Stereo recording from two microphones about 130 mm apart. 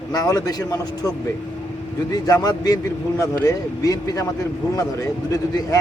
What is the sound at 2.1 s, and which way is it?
Speech, 30° left (ahead or behind).